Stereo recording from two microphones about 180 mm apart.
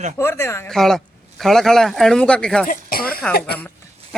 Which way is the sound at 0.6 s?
Centre (ahead or behind).